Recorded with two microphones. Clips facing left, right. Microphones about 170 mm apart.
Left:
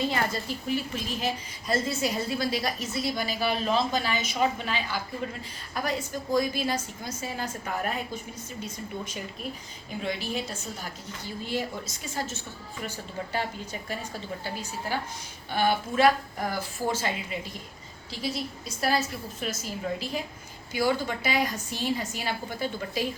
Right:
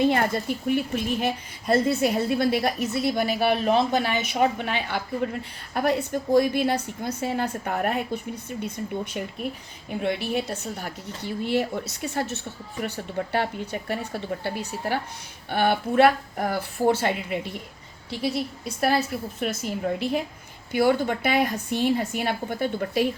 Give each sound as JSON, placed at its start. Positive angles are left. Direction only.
{"t": 0.0, "sound": "speech", "side_deg": -55}